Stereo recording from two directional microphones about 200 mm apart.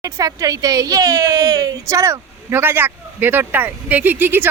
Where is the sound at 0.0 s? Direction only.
15° right (ahead or behind).